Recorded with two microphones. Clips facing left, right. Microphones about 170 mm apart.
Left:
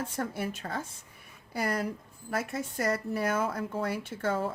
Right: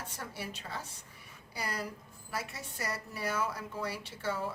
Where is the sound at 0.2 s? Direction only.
50° left (ahead or behind).